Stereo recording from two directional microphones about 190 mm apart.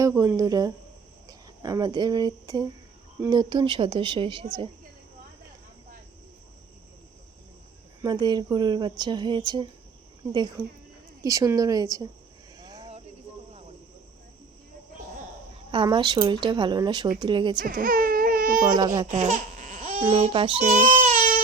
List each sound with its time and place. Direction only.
0.0 s speech: 15° right (ahead or behind)
8.0 s speech: 20° right (ahead or behind)
11.2 s a woman's voice: 20° right (ahead or behind)
12.5 s cricket: 20° right (ahead or behind)
15.7 s speech: 25° right (ahead or behind)
17.7 s baby cry: 50° right (ahead or behind)
18.8 s speech: 20° right (ahead or behind)
19.1 s laughter: 40° right (ahead or behind)
20.0 s speech: 30° right (ahead or behind)